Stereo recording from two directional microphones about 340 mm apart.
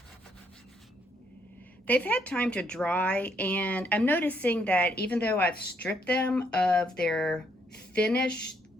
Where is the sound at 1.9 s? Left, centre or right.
Centre.